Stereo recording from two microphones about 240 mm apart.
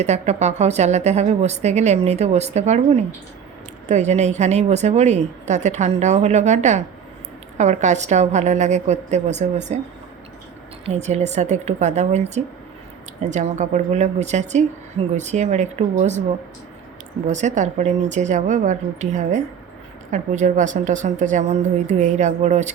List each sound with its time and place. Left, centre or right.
0.0 s a woman's voice: right
10.8 s a woman's voice: right
17.2 s a woman's voice: right